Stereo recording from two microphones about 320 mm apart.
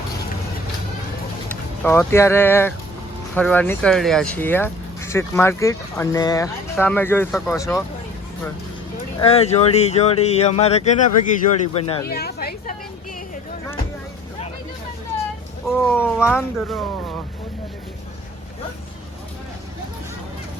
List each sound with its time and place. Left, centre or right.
1.5 s speech: centre
9.1 s speech: centre
12.0 s speech: left
15.6 s speech: centre